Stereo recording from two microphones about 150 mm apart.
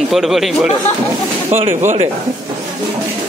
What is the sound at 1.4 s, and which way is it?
Speech, 40° right (ahead or behind).